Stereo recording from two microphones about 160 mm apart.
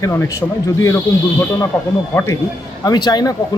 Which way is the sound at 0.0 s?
15° left (ahead or behind).